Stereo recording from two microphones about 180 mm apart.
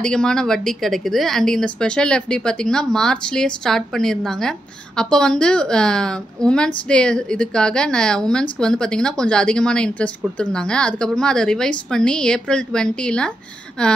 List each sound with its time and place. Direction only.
0.0 s speech: 5° left (ahead or behind)